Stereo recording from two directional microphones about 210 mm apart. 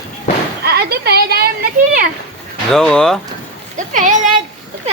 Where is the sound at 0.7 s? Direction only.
50° right (ahead or behind).